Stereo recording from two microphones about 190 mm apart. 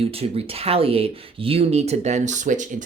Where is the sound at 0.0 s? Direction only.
30° right (ahead or behind).